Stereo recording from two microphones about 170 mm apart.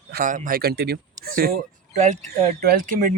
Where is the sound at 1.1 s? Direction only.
55° right (ahead or behind).